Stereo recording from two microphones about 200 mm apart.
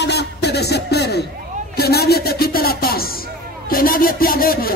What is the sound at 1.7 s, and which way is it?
Speech, 50° left (ahead or behind).